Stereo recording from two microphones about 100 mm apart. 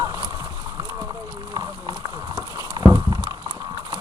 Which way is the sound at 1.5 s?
45° right (ahead or behind).